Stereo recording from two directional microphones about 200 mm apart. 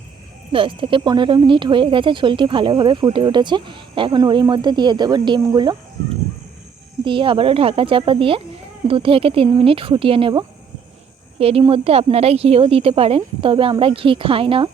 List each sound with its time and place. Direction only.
0.5 s speech: 25° right (ahead or behind)
7.0 s speech: 25° right (ahead or behind)